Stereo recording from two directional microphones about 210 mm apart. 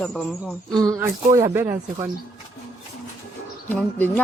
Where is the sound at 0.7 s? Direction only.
15° right (ahead or behind).